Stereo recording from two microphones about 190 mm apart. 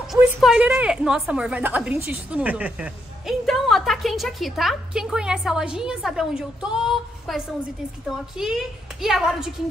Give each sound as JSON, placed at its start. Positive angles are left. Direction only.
{"t": 0.1, "sound": "a woman's voice", "side_deg": 0}